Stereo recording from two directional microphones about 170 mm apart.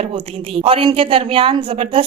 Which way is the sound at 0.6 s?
35° right (ahead or behind).